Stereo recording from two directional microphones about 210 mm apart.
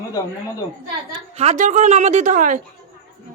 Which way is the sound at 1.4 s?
35° right (ahead or behind).